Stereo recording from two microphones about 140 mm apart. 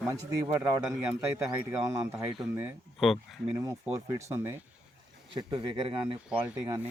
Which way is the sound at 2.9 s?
Centre (ahead or behind).